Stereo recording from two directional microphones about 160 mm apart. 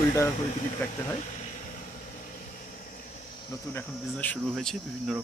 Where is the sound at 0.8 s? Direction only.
15° left (ahead or behind).